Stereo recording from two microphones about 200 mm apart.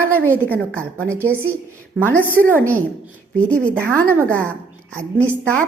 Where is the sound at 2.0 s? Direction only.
10° left (ahead or behind).